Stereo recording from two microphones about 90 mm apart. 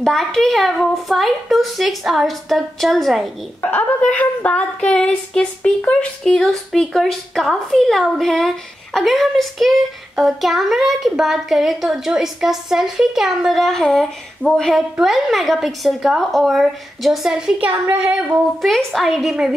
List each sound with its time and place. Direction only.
0.0 s a woman's voice: 5° left (ahead or behind)
3.6 s a woman's voice: 15° left (ahead or behind); by 17.6 s 10° right (ahead or behind)
17.6 s a woman's voice: 25° right (ahead or behind)
18.3 s a woman's voice: centre (ahead or behind)